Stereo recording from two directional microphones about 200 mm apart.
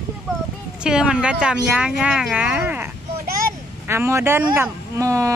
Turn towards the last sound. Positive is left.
turn(degrees=-15)  # may be behind; listen again after turning